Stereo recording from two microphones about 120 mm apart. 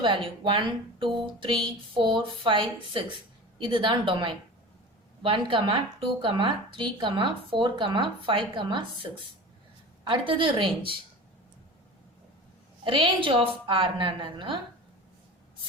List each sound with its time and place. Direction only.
0.0 s speech: 45° right (ahead or behind)
12.8 s speech: 45° right (ahead or behind)